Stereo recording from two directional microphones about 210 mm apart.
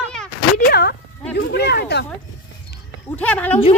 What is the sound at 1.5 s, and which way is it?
Speech, 50° left (ahead or behind).